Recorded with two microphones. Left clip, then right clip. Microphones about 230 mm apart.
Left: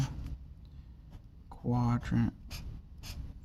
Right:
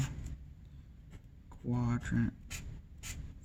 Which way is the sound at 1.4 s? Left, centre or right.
Left.